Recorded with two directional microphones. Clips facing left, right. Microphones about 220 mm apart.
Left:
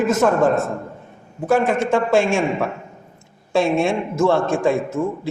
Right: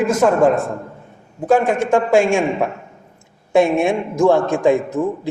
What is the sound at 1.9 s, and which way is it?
A man's voice, 15° right (ahead or behind).